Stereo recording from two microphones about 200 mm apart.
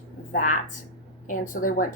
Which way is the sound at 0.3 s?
40° left (ahead or behind).